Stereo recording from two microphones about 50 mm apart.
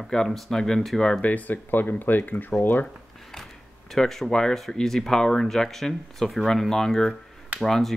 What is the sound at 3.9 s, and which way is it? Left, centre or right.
Speech, centre.